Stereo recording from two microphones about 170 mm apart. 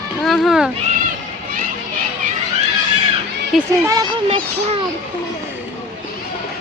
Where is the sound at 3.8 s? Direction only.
20° right (ahead or behind).